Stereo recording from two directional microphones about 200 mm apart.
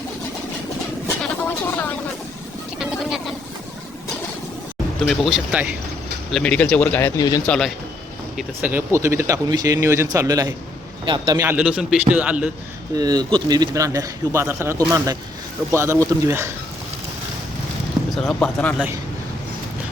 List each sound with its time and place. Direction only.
1.2 s a sound: 10° left (ahead or behind)
2.7 s vehicle: centre (ahead or behind)
5.0 s speech: centre (ahead or behind)
7.2 s speech: 20° left (ahead or behind)
7.4 s speech: 5° left (ahead or behind)
8.4 s speech: 10° right (ahead or behind)
13.0 s speech: 20° right (ahead or behind)
18.1 s speech: 5° left (ahead or behind)